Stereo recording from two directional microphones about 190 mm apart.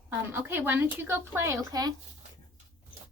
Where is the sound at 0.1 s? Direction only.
10° right (ahead or behind).